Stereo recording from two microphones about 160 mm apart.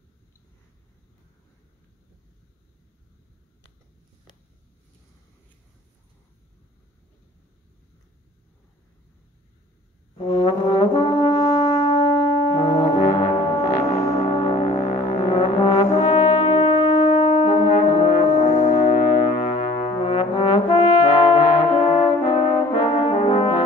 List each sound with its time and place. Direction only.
10.1 s brass instrument: 30° left (ahead or behind)
13.1 s gong: 25° left (ahead or behind)
14.2 s brass instrument: 35° left (ahead or behind)
19.1 s brass instrument: 50° left (ahead or behind); by 23.6 s 30° left (ahead or behind)